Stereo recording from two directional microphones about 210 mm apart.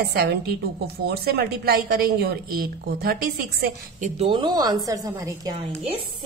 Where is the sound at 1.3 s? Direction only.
50° right (ahead or behind); by 5.5 s 15° right (ahead or behind).